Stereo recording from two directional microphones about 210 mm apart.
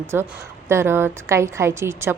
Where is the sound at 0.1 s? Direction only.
10° right (ahead or behind).